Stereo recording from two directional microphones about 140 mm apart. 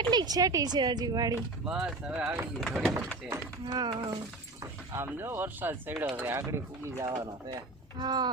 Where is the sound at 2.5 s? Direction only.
Centre (ahead or behind).